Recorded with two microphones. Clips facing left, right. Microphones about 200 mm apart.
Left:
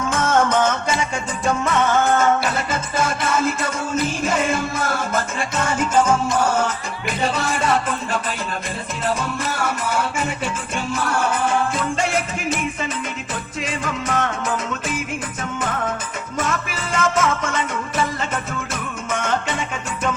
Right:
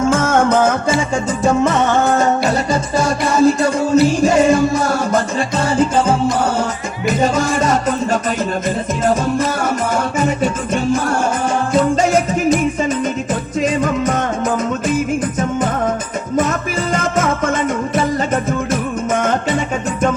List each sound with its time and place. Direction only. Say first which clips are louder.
0.0 s music: right 5 dB; 30° right (ahead or behind)
13.6 s music: right 10 dB; 40° right (ahead or behind)
16.4 s music: right 6 dB; 40° right (ahead or behind)